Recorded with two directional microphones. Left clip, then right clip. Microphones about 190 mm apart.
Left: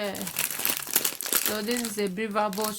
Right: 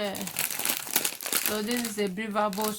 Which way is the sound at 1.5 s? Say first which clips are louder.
Left 1 dB; 25° left (ahead or behind).